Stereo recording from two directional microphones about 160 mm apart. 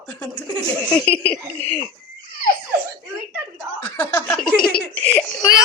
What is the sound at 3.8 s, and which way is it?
Speech, 15° left (ahead or behind).